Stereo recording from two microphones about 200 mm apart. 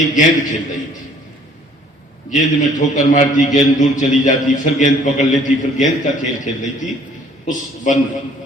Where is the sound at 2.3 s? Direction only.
40° left (ahead or behind).